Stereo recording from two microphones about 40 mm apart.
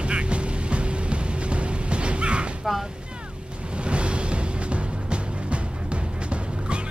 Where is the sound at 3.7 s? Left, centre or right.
Right.